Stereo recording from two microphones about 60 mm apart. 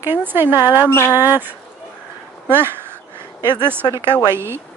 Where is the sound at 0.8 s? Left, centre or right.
Left.